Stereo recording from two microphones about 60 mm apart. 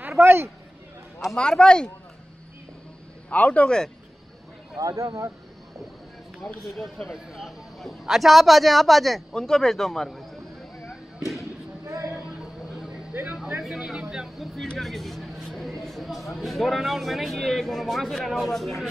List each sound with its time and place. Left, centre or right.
0.2 s speech: right
1.3 s speech: centre
3.3 s a man's voice: left
4.7 s speech: right
6.7 s a man's voice: centre
10.9 s a sound: centre
11.8 s a sound: right
13.6 s speech: centre